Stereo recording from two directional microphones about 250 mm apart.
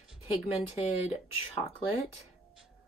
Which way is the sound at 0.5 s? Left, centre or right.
Left.